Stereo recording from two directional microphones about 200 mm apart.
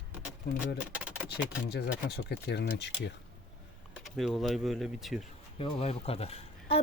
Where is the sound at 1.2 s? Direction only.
55° left (ahead or behind).